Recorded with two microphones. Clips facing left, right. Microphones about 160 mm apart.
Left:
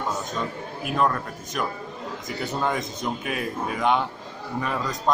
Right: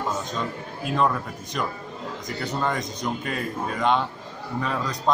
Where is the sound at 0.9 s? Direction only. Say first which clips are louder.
Even; centre (ahead or behind).